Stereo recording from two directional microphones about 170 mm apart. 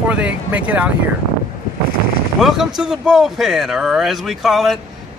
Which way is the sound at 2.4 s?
Centre (ahead or behind).